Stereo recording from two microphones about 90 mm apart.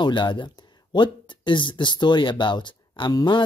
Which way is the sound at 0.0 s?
60° left (ahead or behind).